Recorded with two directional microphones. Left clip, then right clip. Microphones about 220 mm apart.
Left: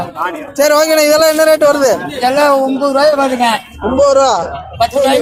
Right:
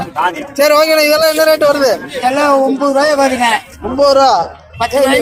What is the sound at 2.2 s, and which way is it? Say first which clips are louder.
Speech: even; 30° left (ahead or behind).